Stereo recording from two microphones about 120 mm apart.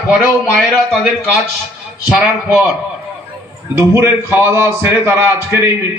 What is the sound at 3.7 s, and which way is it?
A man's voice, 20° right (ahead or behind).